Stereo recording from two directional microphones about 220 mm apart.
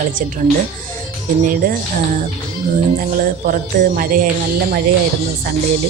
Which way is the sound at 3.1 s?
40° right (ahead or behind).